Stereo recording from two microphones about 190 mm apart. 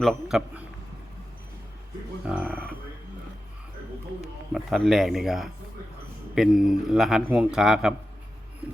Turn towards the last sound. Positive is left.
turn(degrees=-5)  # may be behind; listen again after turning